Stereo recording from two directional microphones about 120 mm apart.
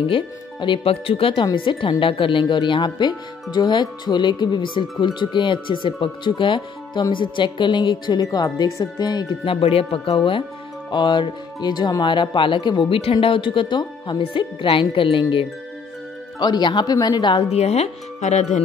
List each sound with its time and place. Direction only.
0.1 s speech: 45° left (ahead or behind)
17.5 s speech: 65° left (ahead or behind)